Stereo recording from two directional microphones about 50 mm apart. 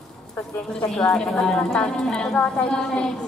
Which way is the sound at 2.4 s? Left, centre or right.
Left.